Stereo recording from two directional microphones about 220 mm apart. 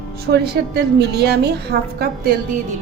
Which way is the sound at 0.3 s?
45° right (ahead or behind).